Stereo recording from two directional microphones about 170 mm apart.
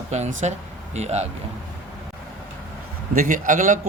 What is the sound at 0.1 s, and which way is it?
Speech, 45° right (ahead or behind).